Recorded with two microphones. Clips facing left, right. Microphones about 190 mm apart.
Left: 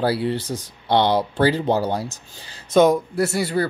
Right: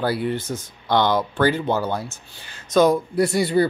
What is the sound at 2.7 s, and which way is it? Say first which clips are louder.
Speech: left 1 dB; 20° left (ahead or behind).